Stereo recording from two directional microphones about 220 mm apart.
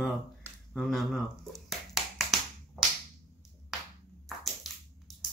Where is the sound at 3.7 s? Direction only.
Centre (ahead or behind).